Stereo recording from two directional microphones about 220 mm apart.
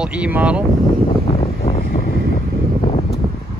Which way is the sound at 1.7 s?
40° left (ahead or behind).